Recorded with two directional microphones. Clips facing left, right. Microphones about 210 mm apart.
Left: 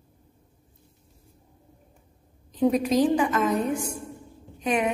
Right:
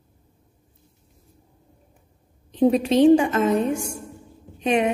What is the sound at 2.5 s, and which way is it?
A woman's voice, 30° right (ahead or behind).